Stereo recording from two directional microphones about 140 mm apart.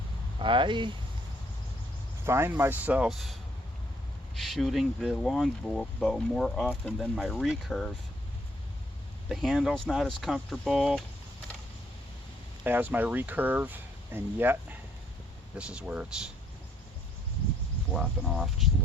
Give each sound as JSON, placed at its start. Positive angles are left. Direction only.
{"t": 0.3, "sound": "speech", "side_deg": -35}
{"t": 2.2, "sound": "speech", "side_deg": -20}
{"t": 4.4, "sound": "speech", "side_deg": 0}
{"t": 9.3, "sound": "speech", "side_deg": 0}
{"t": 12.6, "sound": "speech", "side_deg": -15}
{"t": 17.9, "sound": "speech", "side_deg": 0}